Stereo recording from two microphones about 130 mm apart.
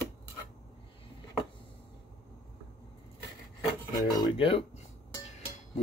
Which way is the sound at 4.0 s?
30° left (ahead or behind).